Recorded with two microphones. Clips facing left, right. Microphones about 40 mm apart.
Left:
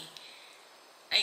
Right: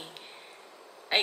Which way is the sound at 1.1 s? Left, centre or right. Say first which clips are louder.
Right 3 dB; centre.